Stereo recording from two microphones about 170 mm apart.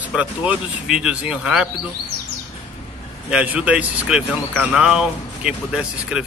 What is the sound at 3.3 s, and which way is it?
Speech, 5° right (ahead or behind).